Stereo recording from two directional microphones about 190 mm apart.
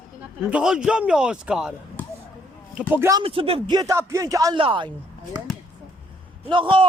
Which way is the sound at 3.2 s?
30° right (ahead or behind).